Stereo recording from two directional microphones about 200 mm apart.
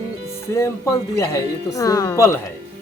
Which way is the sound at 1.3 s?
15° left (ahead or behind).